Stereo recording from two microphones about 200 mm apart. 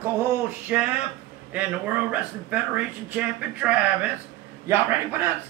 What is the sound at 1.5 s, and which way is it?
A man's voice, 5° right (ahead or behind).